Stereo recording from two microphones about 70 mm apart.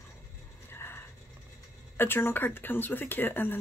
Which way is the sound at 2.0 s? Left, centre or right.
Left.